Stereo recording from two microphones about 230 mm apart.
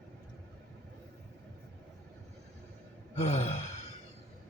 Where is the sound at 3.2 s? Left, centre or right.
Left.